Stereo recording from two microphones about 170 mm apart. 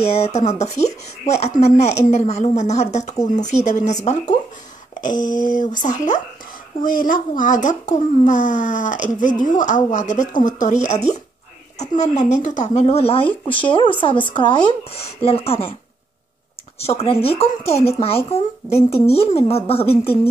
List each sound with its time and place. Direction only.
0.0 s speech: 40° left (ahead or behind)
5.0 s speech: 25° left (ahead or behind)
5.4 s speech: 50° left (ahead or behind); by 15.7 s 35° left (ahead or behind)
16.8 s speech: 35° left (ahead or behind)